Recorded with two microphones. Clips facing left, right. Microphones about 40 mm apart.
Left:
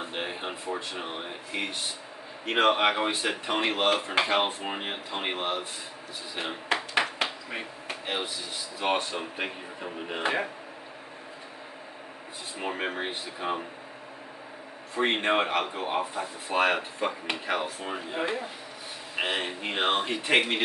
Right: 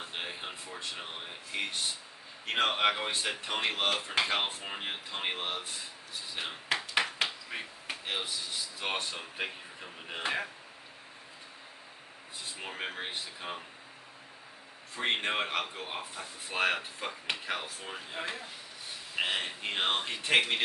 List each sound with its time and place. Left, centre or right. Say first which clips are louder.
0.0 s a sound: left 6 dB; centre
0.7 s speech: left 6 dB; centre
6.3 s a sound: left 4 dB; centre
8.7 s speech: left 9 dB; centre
12.5 s speech: left 8 dB; centre
15.0 s speech: left 5 dB; centre